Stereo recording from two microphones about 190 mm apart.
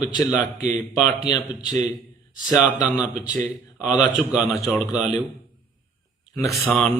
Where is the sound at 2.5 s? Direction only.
5° right (ahead or behind).